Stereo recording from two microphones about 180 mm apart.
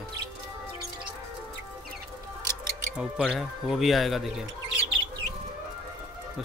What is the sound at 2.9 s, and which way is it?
Speech, 5° right (ahead or behind).